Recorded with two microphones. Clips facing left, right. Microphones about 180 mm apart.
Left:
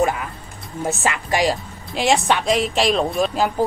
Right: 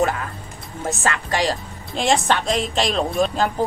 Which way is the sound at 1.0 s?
15° left (ahead or behind).